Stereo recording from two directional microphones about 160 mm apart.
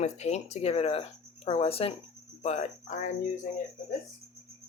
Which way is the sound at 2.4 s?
40° left (ahead or behind).